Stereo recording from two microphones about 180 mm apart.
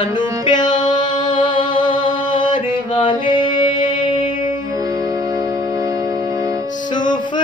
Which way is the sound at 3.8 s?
45° left (ahead or behind).